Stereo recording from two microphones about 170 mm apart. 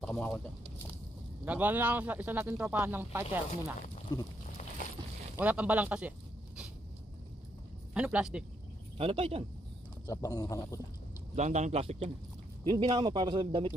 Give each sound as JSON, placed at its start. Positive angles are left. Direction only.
{"t": 0.0, "sound": "a sound", "side_deg": 0}
{"t": 1.4, "sound": "speech", "side_deg": -10}
{"t": 4.1, "sound": "speech", "side_deg": 25}
{"t": 5.3, "sound": "speech", "side_deg": -10}
{"t": 7.9, "sound": "a man's voice", "side_deg": -5}
{"t": 8.9, "sound": "speech", "side_deg": -35}
{"t": 10.0, "sound": "speech", "side_deg": 20}
{"t": 11.3, "sound": "speech", "side_deg": -45}